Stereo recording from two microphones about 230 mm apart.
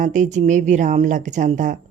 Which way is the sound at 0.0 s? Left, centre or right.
Right.